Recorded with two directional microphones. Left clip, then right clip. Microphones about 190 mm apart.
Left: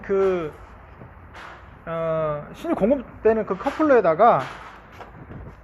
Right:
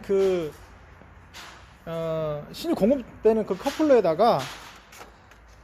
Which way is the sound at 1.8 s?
55° right (ahead or behind).